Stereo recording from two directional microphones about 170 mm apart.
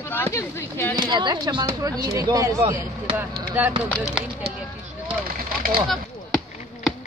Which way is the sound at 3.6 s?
10° right (ahead or behind).